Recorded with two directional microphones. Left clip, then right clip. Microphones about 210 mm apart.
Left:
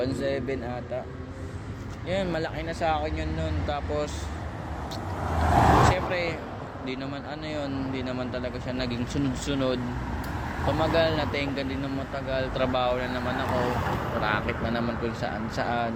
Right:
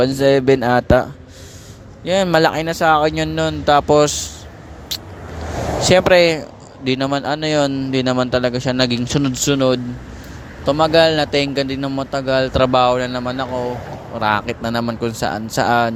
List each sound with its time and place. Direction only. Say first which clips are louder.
0.0 s speech: right 15 dB; 50° right (ahead or behind)
2.0 s speech: right 15 dB; 55° right (ahead or behind)
5.9 s speech: right 16 dB; 55° right (ahead or behind)